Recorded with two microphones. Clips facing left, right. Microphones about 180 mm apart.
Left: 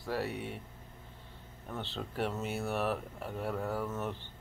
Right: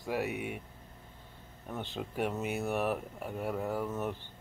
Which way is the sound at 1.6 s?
15° right (ahead or behind).